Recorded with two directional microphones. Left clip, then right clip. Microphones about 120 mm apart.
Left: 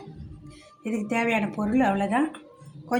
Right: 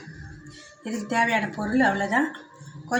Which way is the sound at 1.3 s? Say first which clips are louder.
Right 1 dB; 20° left (ahead or behind).